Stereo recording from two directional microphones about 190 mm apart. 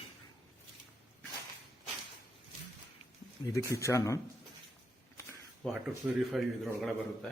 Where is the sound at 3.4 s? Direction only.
15° left (ahead or behind).